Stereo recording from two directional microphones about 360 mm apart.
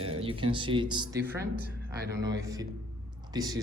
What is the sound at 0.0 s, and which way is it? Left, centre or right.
Speech, centre.